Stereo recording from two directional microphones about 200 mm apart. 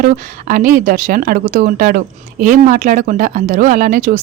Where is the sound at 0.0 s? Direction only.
45° right (ahead or behind).